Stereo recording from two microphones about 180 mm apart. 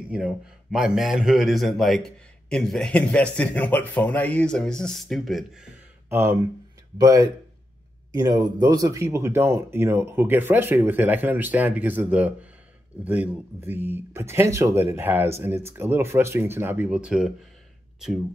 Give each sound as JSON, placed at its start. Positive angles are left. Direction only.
{"t": 0.1, "sound": "a man's voice", "side_deg": -5}